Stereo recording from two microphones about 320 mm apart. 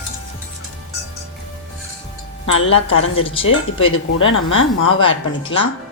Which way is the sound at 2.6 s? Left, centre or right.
Left.